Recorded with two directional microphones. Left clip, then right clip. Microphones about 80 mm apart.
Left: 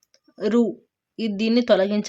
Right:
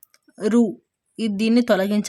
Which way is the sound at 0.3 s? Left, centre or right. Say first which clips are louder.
Right 1 dB; right.